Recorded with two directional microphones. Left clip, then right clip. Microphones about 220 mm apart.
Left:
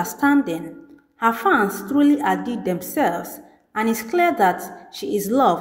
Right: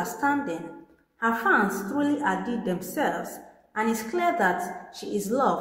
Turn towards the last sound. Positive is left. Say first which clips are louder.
# left 7 dB
turn(degrees=35)  # may be behind; listen again after turning